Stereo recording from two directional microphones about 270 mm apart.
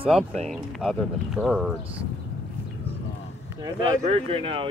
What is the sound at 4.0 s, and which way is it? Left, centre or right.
Speech, right.